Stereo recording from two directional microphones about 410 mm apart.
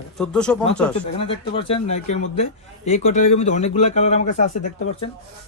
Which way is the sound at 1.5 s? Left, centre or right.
Centre.